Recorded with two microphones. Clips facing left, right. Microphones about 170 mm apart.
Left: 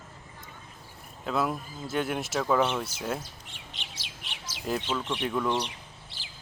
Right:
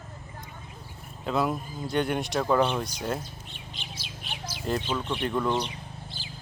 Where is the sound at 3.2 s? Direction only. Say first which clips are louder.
Right 3 dB; 80° left.